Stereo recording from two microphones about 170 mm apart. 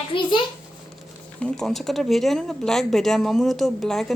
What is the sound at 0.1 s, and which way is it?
Speech, 30° left (ahead or behind).